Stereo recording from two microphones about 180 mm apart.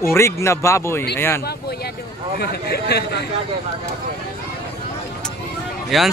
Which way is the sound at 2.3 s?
60° left (ahead or behind).